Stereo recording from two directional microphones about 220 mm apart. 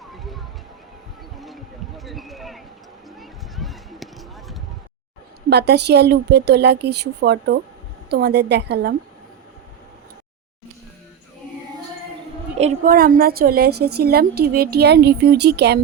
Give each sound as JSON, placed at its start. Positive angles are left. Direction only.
{"t": 0.0, "sound": "music", "side_deg": 0}
{"t": 2.0, "sound": "a sound", "side_deg": 0}
{"t": 5.5, "sound": "a woman's voice", "side_deg": -50}
{"t": 12.5, "sound": "a woman's voice", "side_deg": -35}